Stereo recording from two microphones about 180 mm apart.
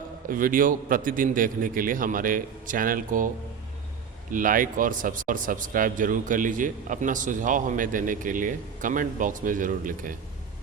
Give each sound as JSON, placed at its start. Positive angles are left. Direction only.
{"t": 0.3, "sound": "a man's voice", "side_deg": -50}
{"t": 4.3, "sound": "a man's voice", "side_deg": -50}